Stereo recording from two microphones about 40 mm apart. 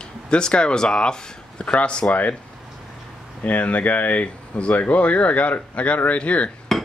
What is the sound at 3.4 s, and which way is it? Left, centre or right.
Speech, left.